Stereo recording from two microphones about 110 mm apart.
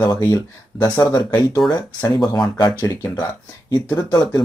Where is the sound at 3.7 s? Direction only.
40° left (ahead or behind).